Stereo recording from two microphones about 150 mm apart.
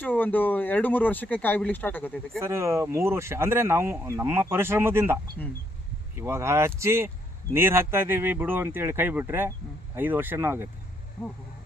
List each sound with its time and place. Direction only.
0.0 s speech: 10° left (ahead or behind)
2.4 s speech: 20° right (ahead or behind)